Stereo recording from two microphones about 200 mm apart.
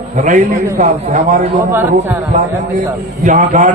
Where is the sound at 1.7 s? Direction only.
10° right (ahead or behind).